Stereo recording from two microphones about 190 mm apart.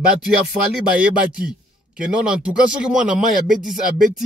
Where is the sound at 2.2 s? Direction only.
5° right (ahead or behind).